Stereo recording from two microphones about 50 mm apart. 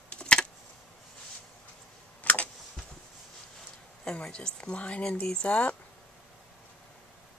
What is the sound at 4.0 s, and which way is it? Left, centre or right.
Speech, centre.